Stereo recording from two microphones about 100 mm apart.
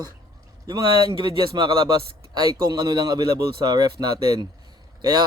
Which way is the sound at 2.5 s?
40° right (ahead or behind).